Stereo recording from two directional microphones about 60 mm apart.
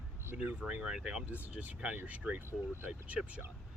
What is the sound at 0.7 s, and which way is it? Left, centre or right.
Speech, centre.